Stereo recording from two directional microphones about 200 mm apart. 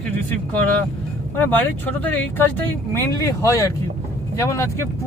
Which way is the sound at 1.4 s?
10° left (ahead or behind).